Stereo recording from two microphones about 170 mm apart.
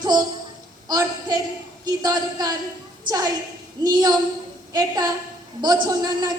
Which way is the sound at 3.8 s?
25° right (ahead or behind).